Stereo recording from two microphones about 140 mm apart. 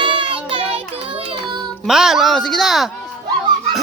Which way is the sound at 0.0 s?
40° right (ahead or behind).